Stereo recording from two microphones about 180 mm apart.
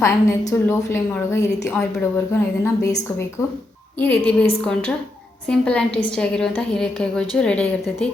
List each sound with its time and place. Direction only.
0.0 s a woman's voice: 15° left (ahead or behind)
4.0 s a woman's voice: 10° left (ahead or behind)